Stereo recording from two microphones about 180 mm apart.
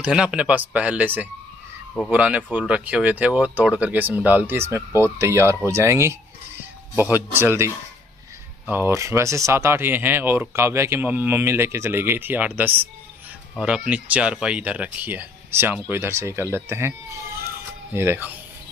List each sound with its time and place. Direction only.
0.0 s speech: 5° right (ahead or behind)
17.9 s speech: 15° right (ahead or behind)